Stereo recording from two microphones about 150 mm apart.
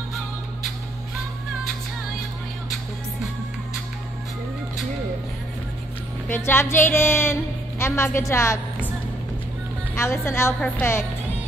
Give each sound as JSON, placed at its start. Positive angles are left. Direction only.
{"t": 6.2, "sound": "speech", "side_deg": 15}
{"t": 9.9, "sound": "speech", "side_deg": 15}